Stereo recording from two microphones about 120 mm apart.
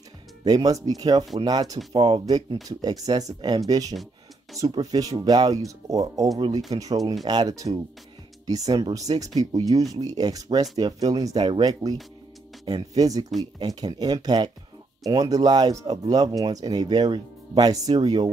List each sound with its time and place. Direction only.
0.5 s speech: 30° right (ahead or behind)